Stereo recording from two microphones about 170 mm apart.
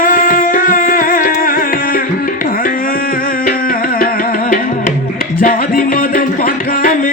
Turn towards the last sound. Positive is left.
turn(degrees=55)  # may be behind; listen again after turning